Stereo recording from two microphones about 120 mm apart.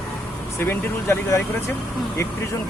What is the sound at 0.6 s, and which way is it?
Speech, 20° left (ahead or behind).